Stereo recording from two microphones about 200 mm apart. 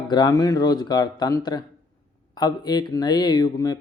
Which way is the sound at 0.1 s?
20° left (ahead or behind).